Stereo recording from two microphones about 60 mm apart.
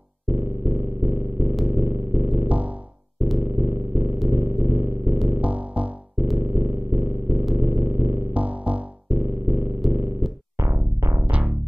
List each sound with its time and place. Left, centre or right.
0.3 s purr: right
2.4 s music: right
3.4 s a sound: right
5.4 s music: right
6.4 s a sound: right
7.5 s purr: right
8.3 s music: right
9.1 s music: right
9.8 s purr: right
10.6 s music: right
11.2 s music: right